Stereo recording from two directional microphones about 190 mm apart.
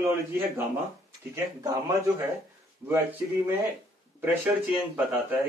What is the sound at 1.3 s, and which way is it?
Speech, 15° right (ahead or behind).